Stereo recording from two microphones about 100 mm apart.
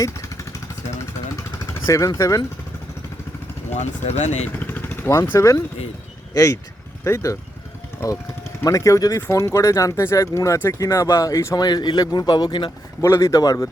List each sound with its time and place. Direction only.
1.9 s speech: 30° left (ahead or behind)
4.0 s speech: 90° left
4.4 s speech: 20° left (ahead or behind)
8.6 s speech: 35° left (ahead or behind)
11.5 s speech: 45° left (ahead or behind)
13.0 s speech: 30° left (ahead or behind)